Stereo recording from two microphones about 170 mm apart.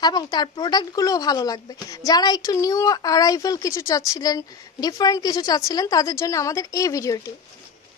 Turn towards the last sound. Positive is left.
turn(degrees=20)  # may be behind; listen again after turning